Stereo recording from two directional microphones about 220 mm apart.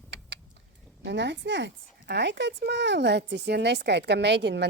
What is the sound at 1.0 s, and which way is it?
Speech, 50° right (ahead or behind).